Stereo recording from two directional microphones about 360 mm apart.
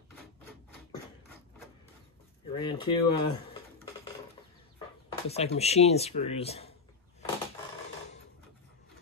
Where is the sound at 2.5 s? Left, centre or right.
Centre.